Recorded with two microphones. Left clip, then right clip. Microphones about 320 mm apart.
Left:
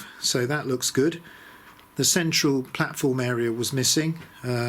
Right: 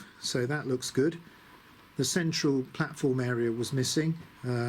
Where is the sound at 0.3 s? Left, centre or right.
Left.